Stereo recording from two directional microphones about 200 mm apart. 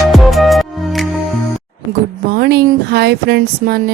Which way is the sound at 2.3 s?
55° right (ahead or behind).